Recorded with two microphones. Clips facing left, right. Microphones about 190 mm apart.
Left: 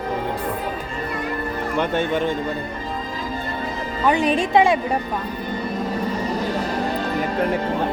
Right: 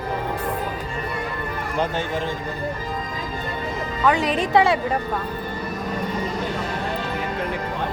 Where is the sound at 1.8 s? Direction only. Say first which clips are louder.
Left 4 dB; 65° left (ahead or behind).